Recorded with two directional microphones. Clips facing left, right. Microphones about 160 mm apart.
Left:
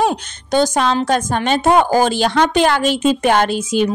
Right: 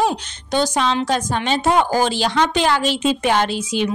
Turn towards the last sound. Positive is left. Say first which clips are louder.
# left 4 dB
turn(degrees=45)  # may be behind; listen again after turning